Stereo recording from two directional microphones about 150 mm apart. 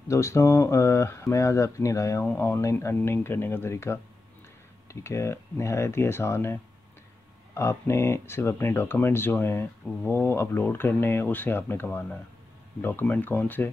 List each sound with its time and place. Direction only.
0.1 s speech: 20° left (ahead or behind)